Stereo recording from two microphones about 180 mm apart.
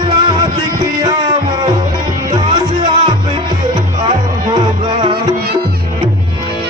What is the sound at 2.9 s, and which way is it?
Music, 20° right (ahead or behind).